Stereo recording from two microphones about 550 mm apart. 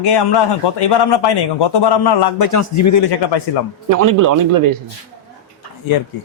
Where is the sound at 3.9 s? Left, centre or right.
Right.